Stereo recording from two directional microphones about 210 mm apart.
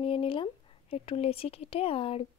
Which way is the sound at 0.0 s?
25° left (ahead or behind).